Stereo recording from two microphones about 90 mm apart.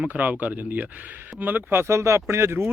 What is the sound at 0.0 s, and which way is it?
Speech, 20° right (ahead or behind).